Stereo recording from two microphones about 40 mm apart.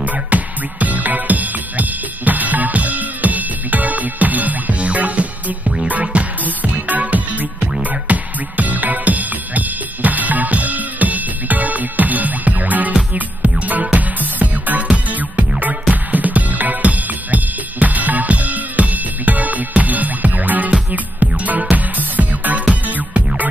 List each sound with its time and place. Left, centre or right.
0.0 s music: right